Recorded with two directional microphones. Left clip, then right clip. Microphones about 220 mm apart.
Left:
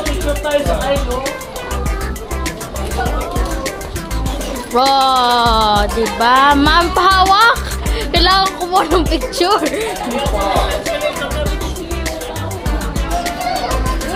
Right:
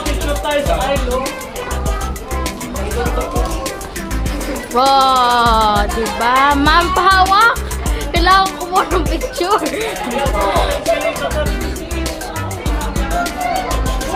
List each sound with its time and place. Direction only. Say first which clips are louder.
4.7 s music: right 1 dB; 15° left (ahead or behind)